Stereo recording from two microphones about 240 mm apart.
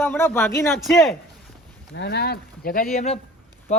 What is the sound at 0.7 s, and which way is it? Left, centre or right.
Speech, centre.